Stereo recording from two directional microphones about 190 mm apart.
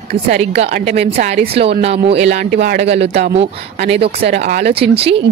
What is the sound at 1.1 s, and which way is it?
Speech, 45° right (ahead or behind).